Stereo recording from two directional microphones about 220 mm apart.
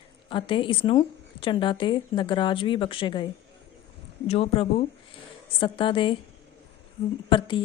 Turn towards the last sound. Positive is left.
turn(degrees=20)  # may be behind; listen again after turning